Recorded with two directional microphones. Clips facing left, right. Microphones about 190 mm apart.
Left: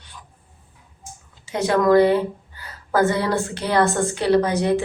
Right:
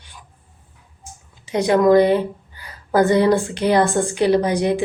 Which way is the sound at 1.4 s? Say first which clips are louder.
Right 4 dB; 15° right (ahead or behind).